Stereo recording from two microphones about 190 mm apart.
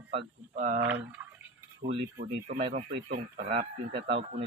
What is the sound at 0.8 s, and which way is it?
Speech, 10° right (ahead or behind).